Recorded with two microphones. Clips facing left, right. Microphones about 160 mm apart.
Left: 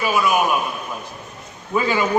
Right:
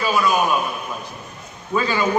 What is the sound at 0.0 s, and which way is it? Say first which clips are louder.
Speech: even; 15° left (ahead or behind).